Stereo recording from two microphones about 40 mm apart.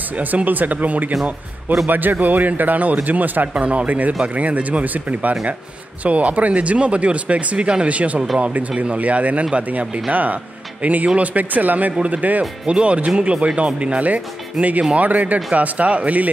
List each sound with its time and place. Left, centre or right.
0.5 s a man's voice: right
5.3 s a man's voice: right
12.6 s speech: right